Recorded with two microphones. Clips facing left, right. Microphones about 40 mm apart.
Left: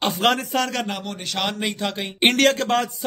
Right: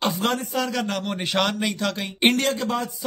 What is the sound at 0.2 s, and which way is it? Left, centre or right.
Speech, left.